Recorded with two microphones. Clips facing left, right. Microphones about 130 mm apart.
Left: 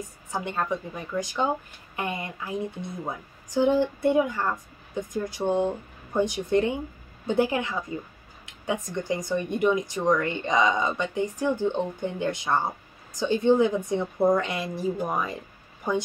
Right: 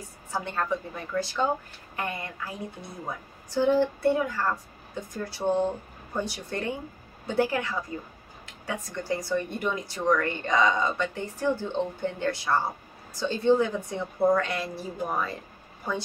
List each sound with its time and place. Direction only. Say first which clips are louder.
0.3 s a woman's voice: even; 15° left (ahead or behind)